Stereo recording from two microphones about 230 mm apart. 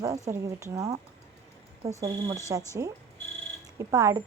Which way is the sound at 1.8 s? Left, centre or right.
Right.